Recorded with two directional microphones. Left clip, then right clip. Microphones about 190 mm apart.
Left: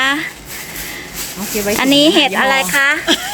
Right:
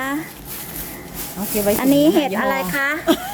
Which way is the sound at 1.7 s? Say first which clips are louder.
Left 6 dB; centre (ahead or behind).